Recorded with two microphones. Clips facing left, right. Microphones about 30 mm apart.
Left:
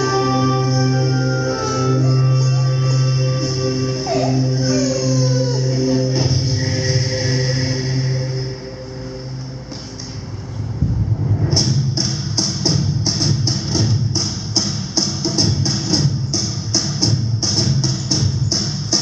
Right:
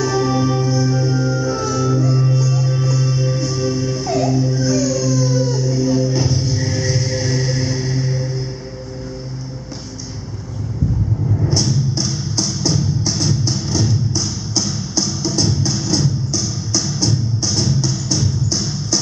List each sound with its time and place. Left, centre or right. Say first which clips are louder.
0.0 s music: left 1 dB; left
11.5 s music: left 1 dB; left